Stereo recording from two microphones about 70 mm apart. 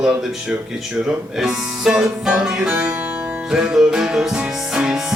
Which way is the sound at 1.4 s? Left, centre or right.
Centre.